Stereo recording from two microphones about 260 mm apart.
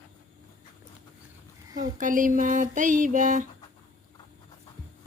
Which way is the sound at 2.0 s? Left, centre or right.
Right.